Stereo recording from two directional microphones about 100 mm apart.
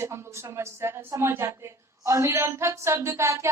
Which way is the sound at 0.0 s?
25° right (ahead or behind).